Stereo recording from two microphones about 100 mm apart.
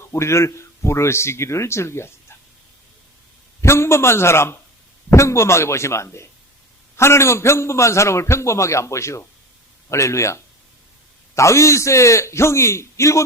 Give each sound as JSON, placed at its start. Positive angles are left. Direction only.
{"t": 0.1, "sound": "a man's voice", "side_deg": 30}
{"t": 3.6, "sound": "a man's voice", "side_deg": 25}